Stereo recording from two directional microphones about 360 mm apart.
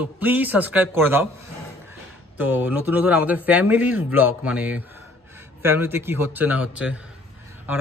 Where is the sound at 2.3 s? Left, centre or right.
Centre.